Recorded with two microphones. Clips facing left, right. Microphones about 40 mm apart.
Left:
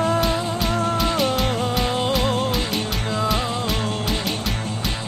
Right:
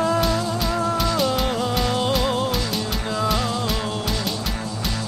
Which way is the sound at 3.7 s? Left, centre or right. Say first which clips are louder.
Left 1 dB; left.